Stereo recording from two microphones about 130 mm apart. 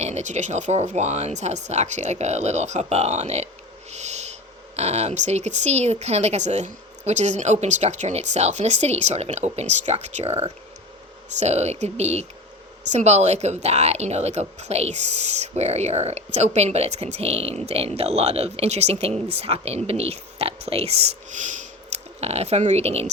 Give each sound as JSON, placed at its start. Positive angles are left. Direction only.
{"t": 0.0, "sound": "speech", "side_deg": -60}
{"t": 3.9, "sound": "owl", "side_deg": -60}
{"t": 4.8, "sound": "speech", "side_deg": -55}